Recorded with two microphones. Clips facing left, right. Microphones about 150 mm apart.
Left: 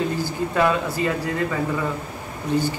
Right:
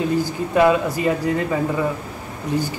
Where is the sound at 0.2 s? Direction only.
15° right (ahead or behind).